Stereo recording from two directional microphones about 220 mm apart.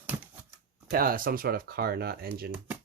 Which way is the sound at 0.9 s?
40° right (ahead or behind).